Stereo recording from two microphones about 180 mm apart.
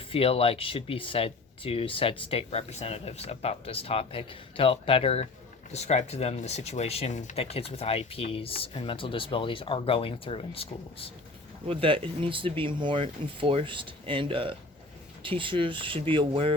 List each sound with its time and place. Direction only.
0.1 s speech: 30° left (ahead or behind)
11.7 s speech: 30° right (ahead or behind)